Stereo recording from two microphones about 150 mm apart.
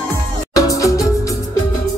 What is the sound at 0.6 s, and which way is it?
Music, 20° left (ahead or behind).